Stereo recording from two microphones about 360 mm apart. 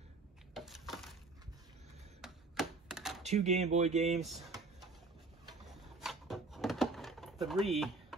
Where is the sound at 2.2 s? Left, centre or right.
Centre.